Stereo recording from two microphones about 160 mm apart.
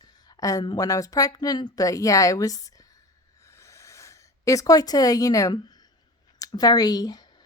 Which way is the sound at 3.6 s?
20° left (ahead or behind).